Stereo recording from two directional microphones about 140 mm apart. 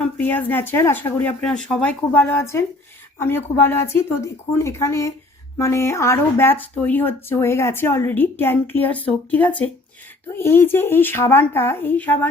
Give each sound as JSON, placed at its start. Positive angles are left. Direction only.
{"t": 0.0, "sound": "a woman's voice", "side_deg": 10}